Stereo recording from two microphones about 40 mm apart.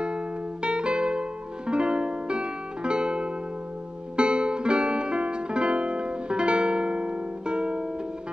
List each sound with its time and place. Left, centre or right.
0.0 s music: right